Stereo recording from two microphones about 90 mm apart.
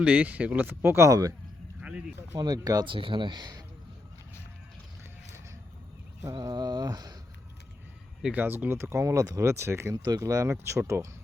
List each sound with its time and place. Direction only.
0.0 s speech: 15° right (ahead or behind); by 1.3 s 35° right (ahead or behind)
1.8 s a sound: 15° right (ahead or behind)
2.4 s speech: 45° right (ahead or behind)
2.8 s speech: 70° right (ahead or behind); by 3.6 s 50° right (ahead or behind)
6.3 s speech: 50° right (ahead or behind)
8.2 s speech: 15° right (ahead or behind); by 9.4 s 40° right (ahead or behind)
9.4 s speech: 30° right (ahead or behind)
9.9 s speech: 45° right (ahead or behind); by 11.1 s 30° right (ahead or behind)